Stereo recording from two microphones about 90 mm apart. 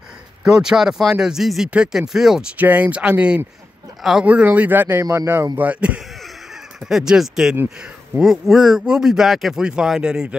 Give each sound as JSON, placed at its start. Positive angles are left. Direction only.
{"t": 0.4, "sound": "speech", "side_deg": -5}
{"t": 2.5, "sound": "speech", "side_deg": -15}
{"t": 4.3, "sound": "speech", "side_deg": -15}
{"t": 5.6, "sound": "speech", "side_deg": -15}